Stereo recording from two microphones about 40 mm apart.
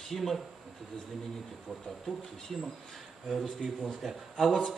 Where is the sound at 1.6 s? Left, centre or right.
Centre.